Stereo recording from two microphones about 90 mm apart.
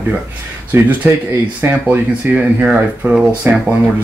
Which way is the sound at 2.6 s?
10° right (ahead or behind).